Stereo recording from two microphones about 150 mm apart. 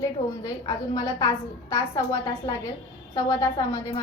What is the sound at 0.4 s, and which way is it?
A woman's voice, 25° left (ahead or behind).